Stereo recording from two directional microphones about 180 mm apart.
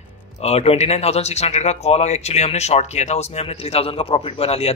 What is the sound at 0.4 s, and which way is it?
Speech, 35° left (ahead or behind).